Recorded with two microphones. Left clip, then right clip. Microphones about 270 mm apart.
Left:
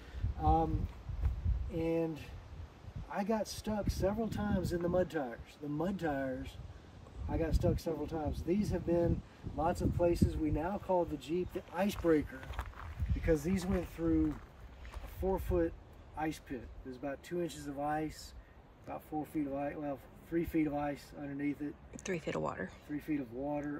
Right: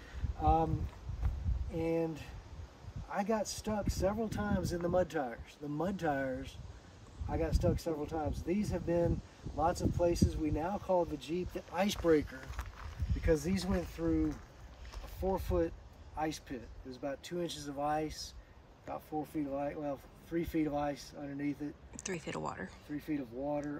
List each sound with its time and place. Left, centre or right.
0.4 s a sound: centre
1.8 s speech: centre
3.1 s speech: centre
12.0 s speech: right
13.1 s speech: centre
15.2 s speech: centre
19.5 s speech: centre